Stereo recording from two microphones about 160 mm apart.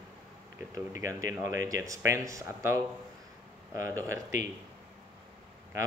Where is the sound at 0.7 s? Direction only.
20° right (ahead or behind).